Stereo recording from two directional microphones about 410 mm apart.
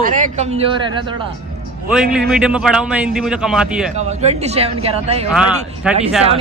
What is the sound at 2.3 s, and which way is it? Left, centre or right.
Speech, centre.